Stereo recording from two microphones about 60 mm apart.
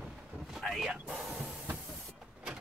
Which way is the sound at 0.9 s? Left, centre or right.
Centre.